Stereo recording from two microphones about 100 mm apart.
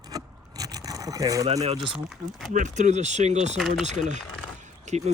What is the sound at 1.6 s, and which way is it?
Speech, 65° right (ahead or behind).